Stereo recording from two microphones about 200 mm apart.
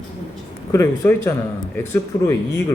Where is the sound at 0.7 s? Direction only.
15° left (ahead or behind).